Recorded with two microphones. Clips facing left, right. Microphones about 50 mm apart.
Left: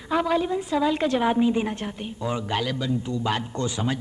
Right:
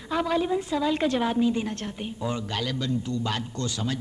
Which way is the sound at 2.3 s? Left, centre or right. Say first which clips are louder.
Left 3 dB; centre.